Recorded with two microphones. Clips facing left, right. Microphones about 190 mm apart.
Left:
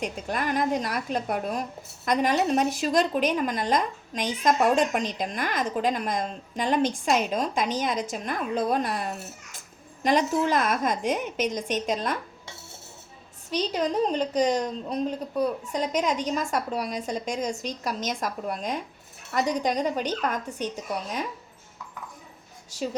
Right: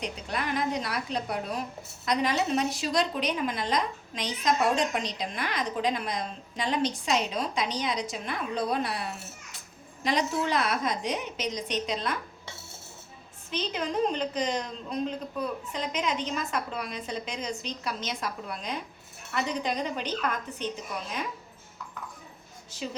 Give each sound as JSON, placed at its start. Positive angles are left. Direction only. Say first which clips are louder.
{"t": 0.0, "sound": "a woman's voice", "louder": "left 4 dB", "side_deg": 50}
{"t": 13.5, "sound": "a woman's voice", "louder": "left 5 dB", "side_deg": 40}